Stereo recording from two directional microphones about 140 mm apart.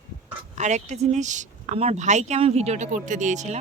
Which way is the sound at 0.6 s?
55° right (ahead or behind).